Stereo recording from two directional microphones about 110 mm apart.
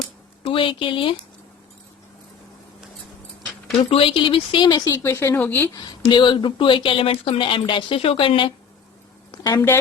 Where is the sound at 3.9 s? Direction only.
55° left (ahead or behind).